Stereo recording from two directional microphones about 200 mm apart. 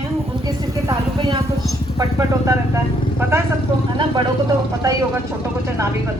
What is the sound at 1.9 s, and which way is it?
A woman's voice, 15° right (ahead or behind).